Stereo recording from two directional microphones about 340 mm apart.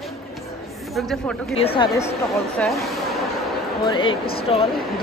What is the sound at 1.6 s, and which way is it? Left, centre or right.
Speech, centre.